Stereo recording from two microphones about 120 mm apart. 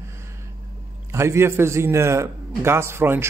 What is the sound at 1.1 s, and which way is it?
Speech, 20° right (ahead or behind).